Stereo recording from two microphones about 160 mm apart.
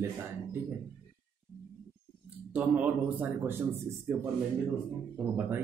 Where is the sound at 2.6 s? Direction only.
10° right (ahead or behind).